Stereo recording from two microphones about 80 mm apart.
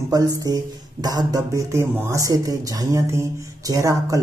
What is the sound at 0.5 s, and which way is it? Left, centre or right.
A man's voice, right.